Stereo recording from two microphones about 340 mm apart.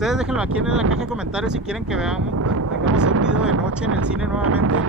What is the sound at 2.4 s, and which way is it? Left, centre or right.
Wind noise, right.